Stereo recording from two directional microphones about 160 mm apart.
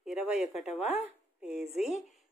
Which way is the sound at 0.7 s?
40° left (ahead or behind).